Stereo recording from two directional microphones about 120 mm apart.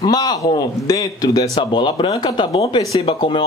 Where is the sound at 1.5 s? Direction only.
45° left (ahead or behind).